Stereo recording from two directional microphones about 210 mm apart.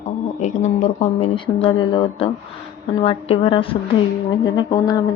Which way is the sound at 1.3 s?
25° left (ahead or behind).